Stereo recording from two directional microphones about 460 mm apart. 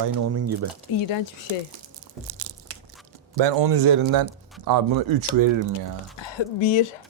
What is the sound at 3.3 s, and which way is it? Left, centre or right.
Speech, right.